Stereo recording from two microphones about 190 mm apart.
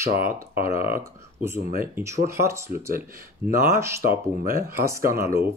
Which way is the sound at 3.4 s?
30° left (ahead or behind).